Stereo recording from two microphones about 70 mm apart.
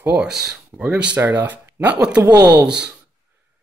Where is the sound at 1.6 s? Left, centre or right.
Right.